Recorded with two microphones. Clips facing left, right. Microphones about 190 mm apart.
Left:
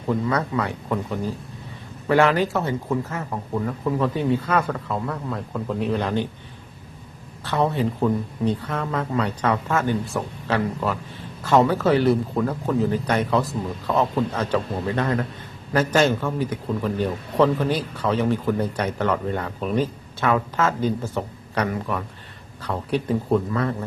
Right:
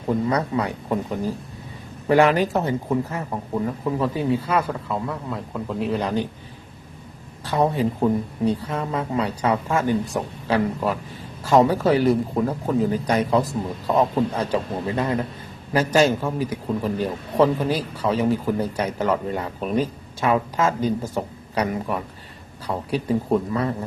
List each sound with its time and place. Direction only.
0.1 s speech: 20° right (ahead or behind)
2.0 s a man's voice: 15° right (ahead or behind)
4.3 s a man's voice: 5° right (ahead or behind)
7.5 s a man's voice: 15° right (ahead or behind)
12.4 s speech: 20° right (ahead or behind)
12.9 s a man's voice: 10° right (ahead or behind)